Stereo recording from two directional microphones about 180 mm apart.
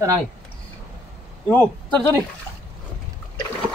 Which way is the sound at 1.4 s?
10° left (ahead or behind).